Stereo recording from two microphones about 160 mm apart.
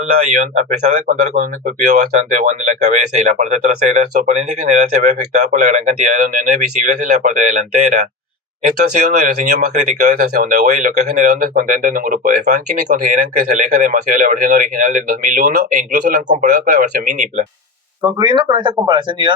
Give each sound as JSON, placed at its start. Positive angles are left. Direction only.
{"t": 0.3, "sound": "speech", "side_deg": -50}
{"t": 16.6, "sound": "speech", "side_deg": -70}
{"t": 17.1, "sound": "speech", "side_deg": -50}
{"t": 18.0, "sound": "speech", "side_deg": -30}